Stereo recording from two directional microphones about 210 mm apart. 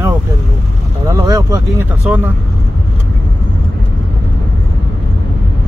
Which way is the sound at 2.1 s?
5° right (ahead or behind).